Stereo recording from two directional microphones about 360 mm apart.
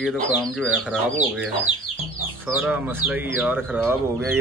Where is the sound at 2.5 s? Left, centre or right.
Centre.